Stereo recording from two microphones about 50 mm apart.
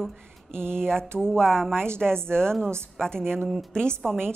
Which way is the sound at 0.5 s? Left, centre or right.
Right.